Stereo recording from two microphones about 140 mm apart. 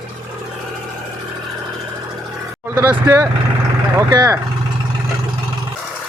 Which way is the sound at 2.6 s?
15° right (ahead or behind).